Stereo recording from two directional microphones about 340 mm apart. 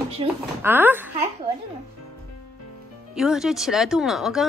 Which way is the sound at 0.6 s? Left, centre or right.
Centre.